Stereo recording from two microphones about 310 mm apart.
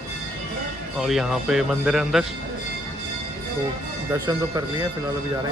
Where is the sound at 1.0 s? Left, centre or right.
Centre.